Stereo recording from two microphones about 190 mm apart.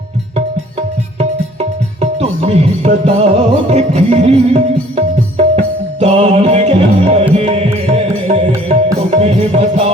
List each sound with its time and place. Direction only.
0.3 s music: 40° right (ahead or behind)